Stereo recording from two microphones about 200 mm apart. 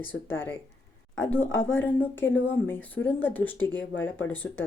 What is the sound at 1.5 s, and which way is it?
Speech, 75° left (ahead or behind).